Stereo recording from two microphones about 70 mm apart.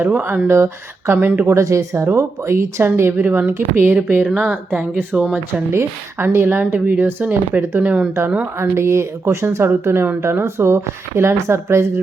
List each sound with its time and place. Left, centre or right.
0.0 s speech: right
1.1 s speech: right
1.5 s speech: right; by 5.6 s centre
5.7 s speech: right
8.8 s speech: right